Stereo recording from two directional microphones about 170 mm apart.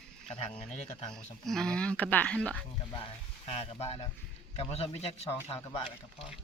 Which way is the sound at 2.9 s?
30° left (ahead or behind).